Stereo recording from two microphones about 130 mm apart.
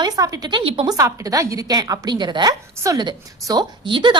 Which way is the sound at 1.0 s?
25° right (ahead or behind).